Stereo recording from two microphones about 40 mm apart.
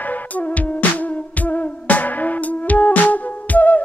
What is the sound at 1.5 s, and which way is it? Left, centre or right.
Music, left.